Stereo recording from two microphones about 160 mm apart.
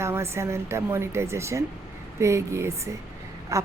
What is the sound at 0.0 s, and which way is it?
Speech, 15° right (ahead or behind).